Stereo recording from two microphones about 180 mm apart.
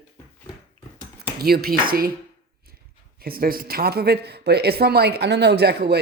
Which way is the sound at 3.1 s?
55° right (ahead or behind).